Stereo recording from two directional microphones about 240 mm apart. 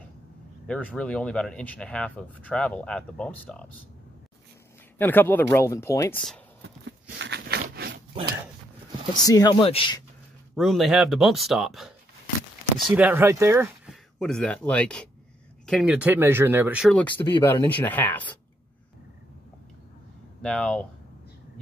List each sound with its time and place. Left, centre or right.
0.7 s speech: centre
4.9 s speech: centre
6.6 s a sound: right
9.1 s speech: centre
10.5 s speech: centre
12.9 s speech: centre
20.4 s speech: centre